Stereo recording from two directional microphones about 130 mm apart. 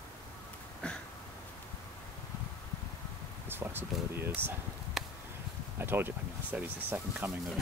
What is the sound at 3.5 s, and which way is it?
Speech, 15° right (ahead or behind).